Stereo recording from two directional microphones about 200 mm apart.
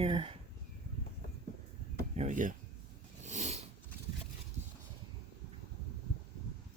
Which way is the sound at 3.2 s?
35° right (ahead or behind).